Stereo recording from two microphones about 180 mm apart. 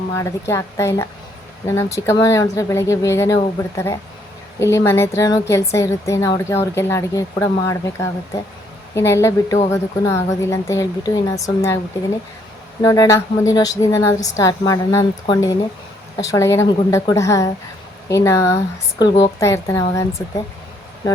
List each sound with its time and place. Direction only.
0.1 s a woman's voice: 15° left (ahead or behind)
12.8 s a woman's voice: 15° left (ahead or behind)